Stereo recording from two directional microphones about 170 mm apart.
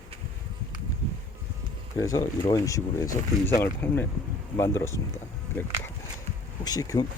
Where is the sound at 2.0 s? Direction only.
20° left (ahead or behind).